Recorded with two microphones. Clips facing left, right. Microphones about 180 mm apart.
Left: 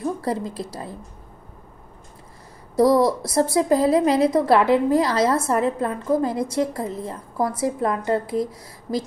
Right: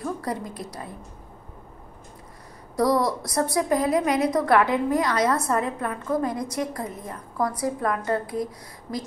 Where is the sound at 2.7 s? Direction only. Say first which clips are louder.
Left 5 dB; 25° left (ahead or behind).